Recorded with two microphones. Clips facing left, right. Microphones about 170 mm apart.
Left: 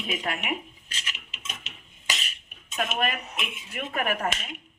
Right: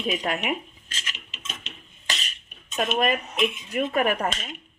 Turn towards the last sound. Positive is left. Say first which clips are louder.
# right 4 dB
turn(degrees=-30)  # may be behind; listen again after turning